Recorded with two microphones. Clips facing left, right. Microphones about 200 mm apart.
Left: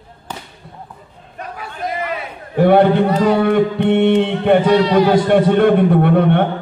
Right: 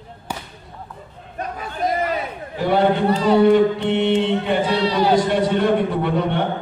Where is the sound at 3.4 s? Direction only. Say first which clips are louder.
Even; 55° left (ahead or behind).